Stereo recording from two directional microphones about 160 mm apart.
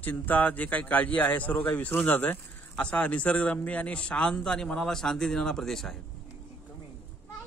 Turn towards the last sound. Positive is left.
turn(degrees=0)  # may be behind; listen again after turning